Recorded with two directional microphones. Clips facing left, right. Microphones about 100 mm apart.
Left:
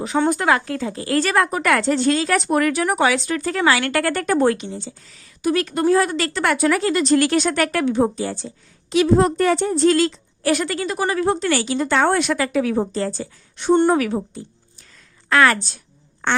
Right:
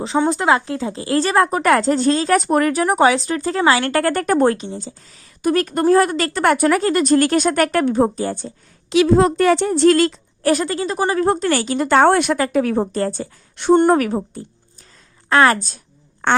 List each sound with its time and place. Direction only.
0.2 s a woman's voice: 20° right (ahead or behind); by 8.5 s 50° right (ahead or behind)
8.9 s a woman's voice: 90° right; by 10.5 s 50° right (ahead or behind)
10.5 s a woman's voice: 30° right (ahead or behind)